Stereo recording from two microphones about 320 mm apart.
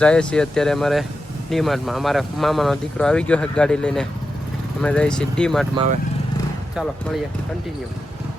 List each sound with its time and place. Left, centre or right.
0.0 s speech: centre